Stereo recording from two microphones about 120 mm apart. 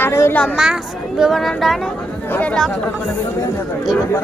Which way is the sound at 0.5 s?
5° right (ahead or behind).